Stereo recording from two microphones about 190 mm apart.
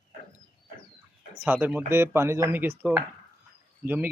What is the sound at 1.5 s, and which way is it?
Speech, 10° right (ahead or behind).